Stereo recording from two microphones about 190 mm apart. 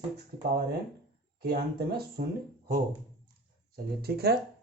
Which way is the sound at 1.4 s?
55° right (ahead or behind).